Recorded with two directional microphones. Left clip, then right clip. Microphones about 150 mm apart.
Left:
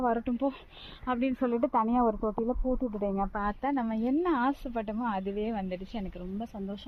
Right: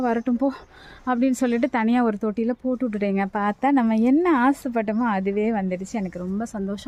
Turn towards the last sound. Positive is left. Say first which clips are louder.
# right 9 dB
turn(degrees=-20)  # may be behind; listen again after turning